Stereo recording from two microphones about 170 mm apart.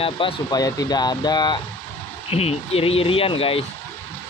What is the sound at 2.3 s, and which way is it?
Speech, 35° left (ahead or behind).